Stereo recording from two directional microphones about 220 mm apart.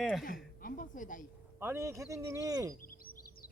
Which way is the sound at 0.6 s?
40° left (ahead or behind).